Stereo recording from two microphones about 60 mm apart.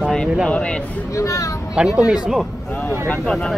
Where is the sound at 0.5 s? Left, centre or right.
Centre.